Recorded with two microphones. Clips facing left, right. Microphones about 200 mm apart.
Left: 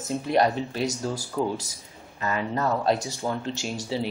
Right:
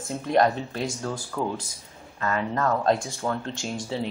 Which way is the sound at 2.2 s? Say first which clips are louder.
Right 1 dB; 10° left (ahead or behind).